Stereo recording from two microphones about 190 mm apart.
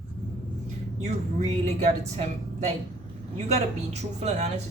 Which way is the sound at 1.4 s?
35° right (ahead or behind).